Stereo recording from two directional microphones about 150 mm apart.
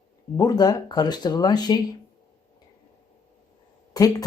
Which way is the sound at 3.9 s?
25° left (ahead or behind).